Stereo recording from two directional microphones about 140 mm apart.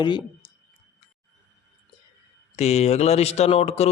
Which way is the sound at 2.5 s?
50° left (ahead or behind).